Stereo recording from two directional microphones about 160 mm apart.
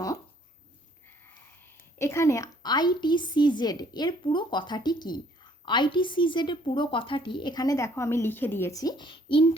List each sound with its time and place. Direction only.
1.6 s a woman's voice: 15° left (ahead or behind); by 9.5 s 35° left (ahead or behind)